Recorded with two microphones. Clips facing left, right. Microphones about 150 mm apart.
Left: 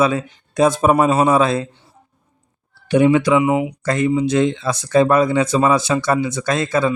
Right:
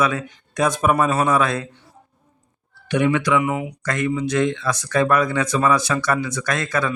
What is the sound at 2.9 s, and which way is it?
Speech, 25° left (ahead or behind).